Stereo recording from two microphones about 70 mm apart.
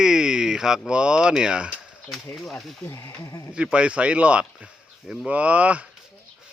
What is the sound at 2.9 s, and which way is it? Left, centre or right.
Speech, left.